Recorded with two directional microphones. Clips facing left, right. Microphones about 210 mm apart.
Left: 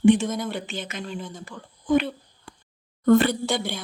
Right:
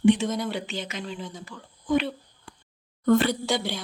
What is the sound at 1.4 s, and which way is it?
Speech, 50° left (ahead or behind).